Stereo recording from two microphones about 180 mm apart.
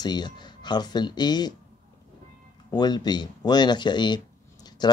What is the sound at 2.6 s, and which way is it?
Speech, 25° left (ahead or behind).